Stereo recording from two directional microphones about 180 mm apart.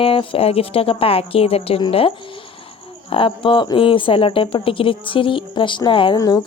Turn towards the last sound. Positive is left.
turn(degrees=20)  # may be behind; listen again after turning